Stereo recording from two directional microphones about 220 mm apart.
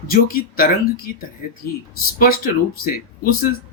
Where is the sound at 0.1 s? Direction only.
40° left (ahead or behind).